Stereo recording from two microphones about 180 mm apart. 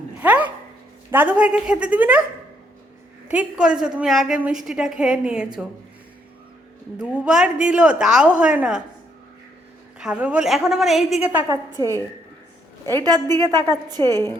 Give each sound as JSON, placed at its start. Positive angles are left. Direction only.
{"t": 0.2, "sound": "dog", "side_deg": -10}
{"t": 1.1, "sound": "a woman's voice", "side_deg": -10}
{"t": 3.2, "sound": "a woman's voice", "side_deg": -5}
{"t": 7.0, "sound": "a woman's voice", "side_deg": -5}
{"t": 10.0, "sound": "a woman's voice", "side_deg": -5}
{"t": 12.9, "sound": "a woman's voice", "side_deg": -20}
{"t": 14.1, "sound": "a woman's voice", "side_deg": 15}